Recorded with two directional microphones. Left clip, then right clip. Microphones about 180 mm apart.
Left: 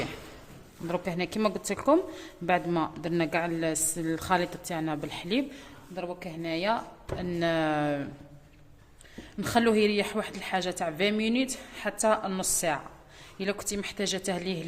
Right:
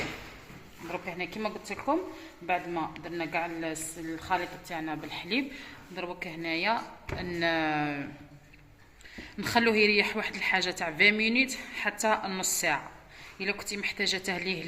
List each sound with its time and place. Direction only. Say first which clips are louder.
0.9 s a woman's voice: left 4 dB; 70° left (ahead or behind); by 8.0 s 50° left (ahead or behind)
9.1 s a woman's voice: even; 40° left (ahead or behind)